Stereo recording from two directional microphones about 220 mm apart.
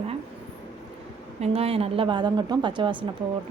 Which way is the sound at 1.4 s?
25° right (ahead or behind).